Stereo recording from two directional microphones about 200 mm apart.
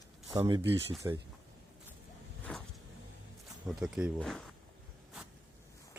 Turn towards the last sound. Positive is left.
turn(degrees=0)  # may be behind; listen again after turning